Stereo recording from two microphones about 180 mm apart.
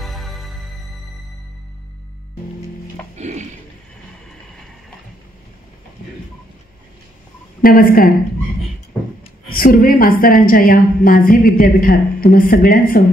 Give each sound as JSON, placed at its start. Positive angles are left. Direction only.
{"t": 0.0, "sound": "music", "side_deg": 0}
{"t": 3.2, "sound": "music", "side_deg": -40}
{"t": 7.6, "sound": "a woman's voice", "side_deg": 55}
{"t": 9.5, "sound": "a woman's voice", "side_deg": 50}